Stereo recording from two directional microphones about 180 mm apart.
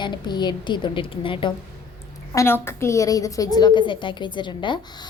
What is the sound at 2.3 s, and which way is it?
A woman's voice, 15° left (ahead or behind).